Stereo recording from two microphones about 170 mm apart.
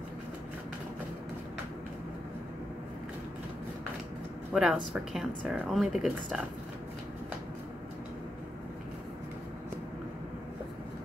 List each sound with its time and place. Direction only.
4.5 s speech: 5° right (ahead or behind)